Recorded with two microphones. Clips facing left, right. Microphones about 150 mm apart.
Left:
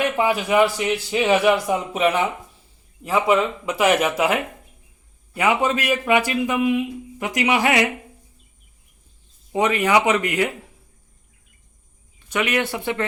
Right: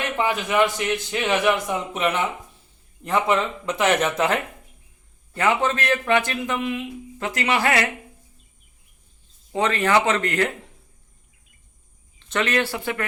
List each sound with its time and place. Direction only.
0.2 s speech: 10° left (ahead or behind)
9.5 s speech: 15° left (ahead or behind)
12.3 s speech: 15° left (ahead or behind)